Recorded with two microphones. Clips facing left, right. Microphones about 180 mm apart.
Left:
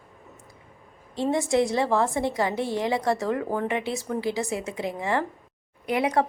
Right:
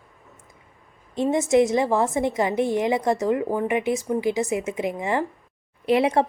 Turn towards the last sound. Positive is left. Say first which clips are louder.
# right 4 dB
turn(degrees=-25)  # may be behind; listen again after turning